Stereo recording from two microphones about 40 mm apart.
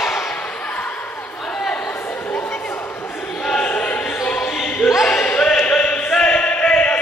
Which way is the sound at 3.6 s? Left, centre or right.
Left.